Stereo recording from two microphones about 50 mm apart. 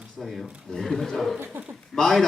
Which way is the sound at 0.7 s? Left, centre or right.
Centre.